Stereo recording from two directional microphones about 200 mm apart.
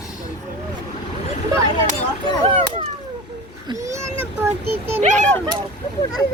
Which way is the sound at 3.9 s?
10° right (ahead or behind).